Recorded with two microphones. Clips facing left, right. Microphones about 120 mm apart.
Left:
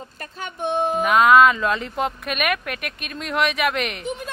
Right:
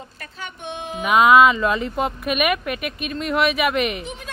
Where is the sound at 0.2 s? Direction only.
45° left (ahead or behind).